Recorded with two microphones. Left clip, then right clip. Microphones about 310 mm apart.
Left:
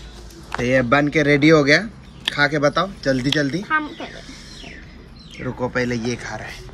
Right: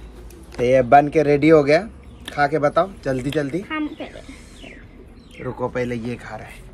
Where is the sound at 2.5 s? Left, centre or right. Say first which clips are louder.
Right 1 dB; centre.